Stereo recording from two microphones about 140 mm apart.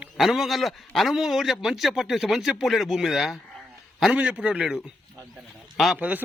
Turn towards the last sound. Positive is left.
turn(degrees=-10)  # may be behind; listen again after turning